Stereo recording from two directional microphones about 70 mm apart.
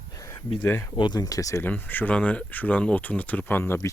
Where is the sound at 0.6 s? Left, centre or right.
Left.